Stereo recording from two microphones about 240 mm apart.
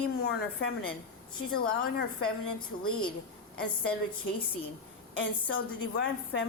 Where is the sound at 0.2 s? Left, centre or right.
Left.